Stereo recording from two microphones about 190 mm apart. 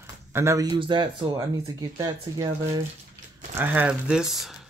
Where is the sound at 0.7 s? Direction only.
25° right (ahead or behind).